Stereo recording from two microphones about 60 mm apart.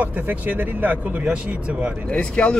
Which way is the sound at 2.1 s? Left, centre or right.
Centre.